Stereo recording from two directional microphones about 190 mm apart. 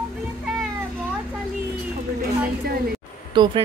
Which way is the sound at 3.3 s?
25° right (ahead or behind).